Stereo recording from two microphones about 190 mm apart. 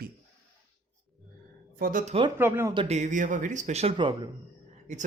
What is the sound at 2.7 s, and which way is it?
Speech, 35° right (ahead or behind).